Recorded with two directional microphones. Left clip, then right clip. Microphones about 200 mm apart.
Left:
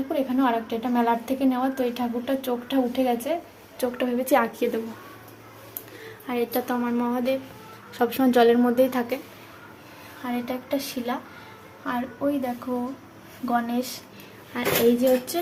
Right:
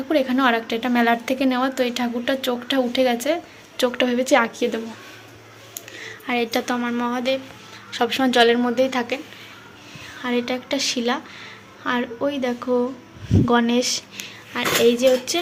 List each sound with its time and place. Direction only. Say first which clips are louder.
0.1 s a woman's voice: right 6 dB; 15° right (ahead or behind); by 4.8 s centre (ahead or behind)
6.2 s a woman's voice: right 4 dB; 5° right (ahead or behind)
10.2 s a woman's voice: right 6 dB; 15° right (ahead or behind)
14.5 s speech: right 4 dB; centre (ahead or behind)